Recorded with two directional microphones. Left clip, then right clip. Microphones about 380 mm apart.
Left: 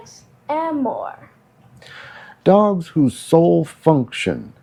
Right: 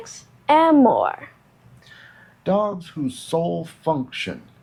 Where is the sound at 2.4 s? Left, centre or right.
Left.